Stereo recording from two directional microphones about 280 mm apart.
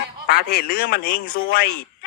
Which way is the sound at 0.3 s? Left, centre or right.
Left.